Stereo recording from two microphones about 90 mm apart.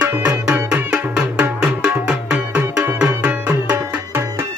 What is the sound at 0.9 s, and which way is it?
Music, 10° right (ahead or behind).